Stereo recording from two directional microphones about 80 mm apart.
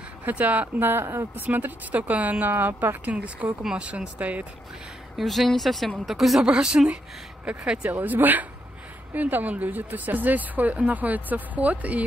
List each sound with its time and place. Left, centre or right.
0.2 s speech: centre
5.1 s speech: centre